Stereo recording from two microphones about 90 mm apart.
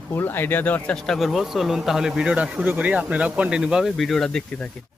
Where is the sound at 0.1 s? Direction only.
25° left (ahead or behind).